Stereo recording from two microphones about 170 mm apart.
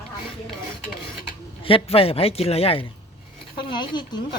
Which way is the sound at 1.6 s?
30° left (ahead or behind).